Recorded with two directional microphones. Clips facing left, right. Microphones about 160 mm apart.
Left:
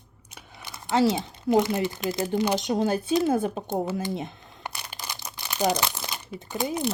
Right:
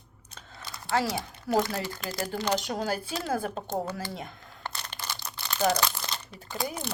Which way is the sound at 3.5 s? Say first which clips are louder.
Left 4 dB; 10° left (ahead or behind).